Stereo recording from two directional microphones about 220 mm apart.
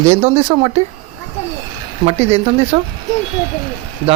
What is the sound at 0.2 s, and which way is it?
Speech, 30° right (ahead or behind).